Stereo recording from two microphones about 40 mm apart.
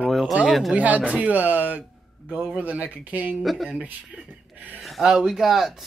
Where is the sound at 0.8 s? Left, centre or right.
Right.